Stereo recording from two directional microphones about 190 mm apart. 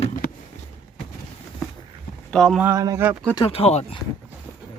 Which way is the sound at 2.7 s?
15° right (ahead or behind).